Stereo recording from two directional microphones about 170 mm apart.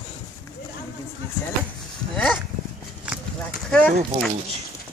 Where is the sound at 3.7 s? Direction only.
5° left (ahead or behind).